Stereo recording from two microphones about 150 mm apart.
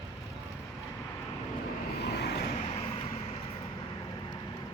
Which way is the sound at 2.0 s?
90° left.